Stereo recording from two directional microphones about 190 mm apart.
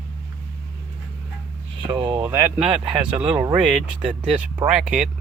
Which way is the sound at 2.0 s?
10° right (ahead or behind).